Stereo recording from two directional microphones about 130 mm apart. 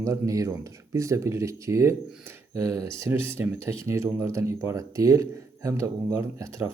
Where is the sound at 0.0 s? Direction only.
25° right (ahead or behind).